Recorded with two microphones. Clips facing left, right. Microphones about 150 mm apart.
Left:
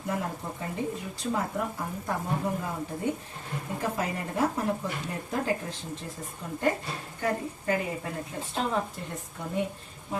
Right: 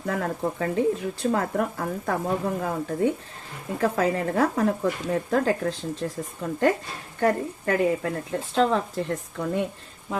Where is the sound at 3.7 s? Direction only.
75° right (ahead or behind); by 6.6 s 90° right.